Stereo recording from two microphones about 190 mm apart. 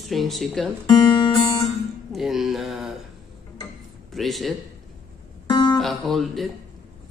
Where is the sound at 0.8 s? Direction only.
25° left (ahead or behind).